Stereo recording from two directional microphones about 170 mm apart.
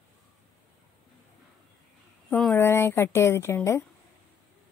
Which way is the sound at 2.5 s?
15° left (ahead or behind).